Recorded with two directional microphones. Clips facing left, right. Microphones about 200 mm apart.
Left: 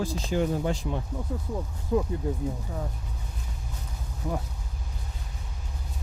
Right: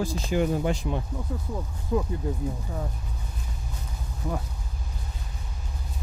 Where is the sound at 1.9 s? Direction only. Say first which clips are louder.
Left 1 dB; 35° left (ahead or behind).